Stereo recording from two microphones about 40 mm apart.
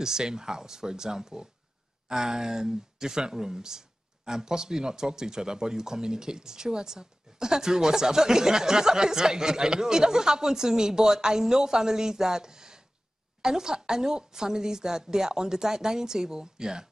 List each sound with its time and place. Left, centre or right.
0.0 s speech: centre